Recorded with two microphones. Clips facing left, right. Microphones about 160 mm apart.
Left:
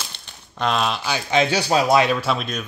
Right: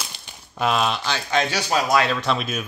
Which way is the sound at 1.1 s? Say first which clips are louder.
Left 3 dB; 25° left (ahead or behind).